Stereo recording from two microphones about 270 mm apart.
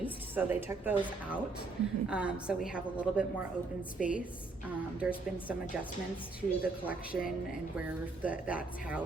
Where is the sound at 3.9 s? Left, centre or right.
Left.